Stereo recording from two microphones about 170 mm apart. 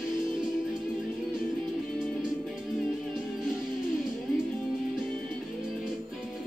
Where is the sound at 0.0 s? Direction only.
5° right (ahead or behind).